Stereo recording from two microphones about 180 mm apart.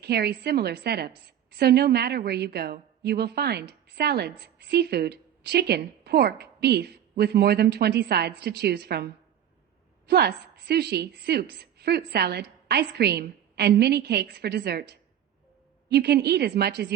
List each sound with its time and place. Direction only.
0.0 s a woman's voice: 65° right (ahead or behind)